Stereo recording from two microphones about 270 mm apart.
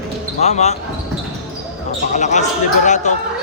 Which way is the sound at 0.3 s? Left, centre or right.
Left.